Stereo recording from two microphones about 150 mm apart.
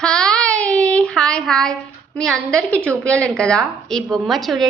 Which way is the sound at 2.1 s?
5° left (ahead or behind).